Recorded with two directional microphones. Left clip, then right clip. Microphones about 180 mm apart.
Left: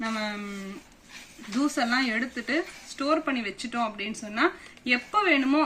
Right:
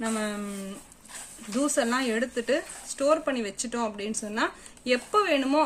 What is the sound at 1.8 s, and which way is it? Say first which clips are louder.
Speech: even; 45° right (ahead or behind).